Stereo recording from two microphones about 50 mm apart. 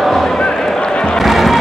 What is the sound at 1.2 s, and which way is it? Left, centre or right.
Music, centre.